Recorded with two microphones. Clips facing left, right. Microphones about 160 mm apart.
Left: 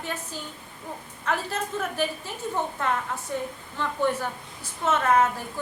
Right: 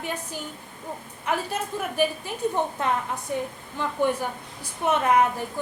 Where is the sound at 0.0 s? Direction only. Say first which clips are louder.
Right 2 dB; 15° right (ahead or behind).